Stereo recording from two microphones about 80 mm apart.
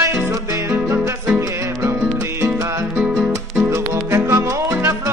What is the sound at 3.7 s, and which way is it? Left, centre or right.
Music, right.